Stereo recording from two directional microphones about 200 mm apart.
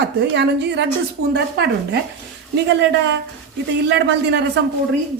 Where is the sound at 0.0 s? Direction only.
60° right (ahead or behind).